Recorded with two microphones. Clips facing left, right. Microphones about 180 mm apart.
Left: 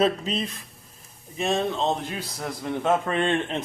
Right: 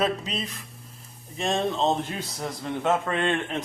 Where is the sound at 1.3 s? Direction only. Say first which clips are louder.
Left 1 dB; centre (ahead or behind).